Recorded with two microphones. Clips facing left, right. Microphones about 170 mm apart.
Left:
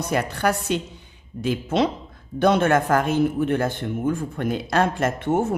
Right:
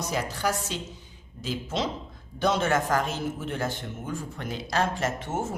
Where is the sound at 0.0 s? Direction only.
60° left (ahead or behind).